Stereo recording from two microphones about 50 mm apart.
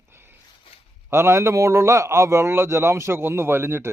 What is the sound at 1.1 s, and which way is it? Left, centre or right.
A man's voice, right.